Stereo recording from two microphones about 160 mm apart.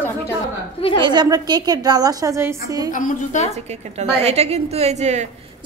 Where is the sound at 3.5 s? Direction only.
45° right (ahead or behind).